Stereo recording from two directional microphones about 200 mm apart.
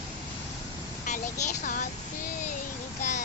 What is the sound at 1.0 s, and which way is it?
Speech, 40° left (ahead or behind).